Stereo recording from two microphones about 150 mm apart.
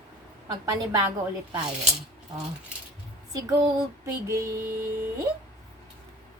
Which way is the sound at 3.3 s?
25° right (ahead or behind).